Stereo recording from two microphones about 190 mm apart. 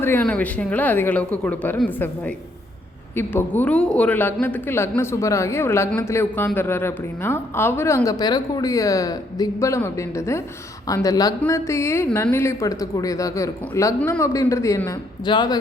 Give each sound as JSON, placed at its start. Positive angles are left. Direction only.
{"t": 0.0, "sound": "speech", "side_deg": 10}